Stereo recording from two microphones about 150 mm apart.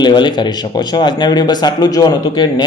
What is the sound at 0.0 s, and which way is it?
Speech, 30° left (ahead or behind).